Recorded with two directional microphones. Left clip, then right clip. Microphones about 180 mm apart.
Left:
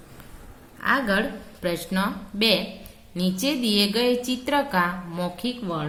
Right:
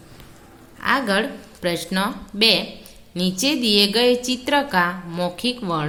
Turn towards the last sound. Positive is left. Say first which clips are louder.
# right 5 dB
turn(degrees=-35)  # may be behind; listen again after turning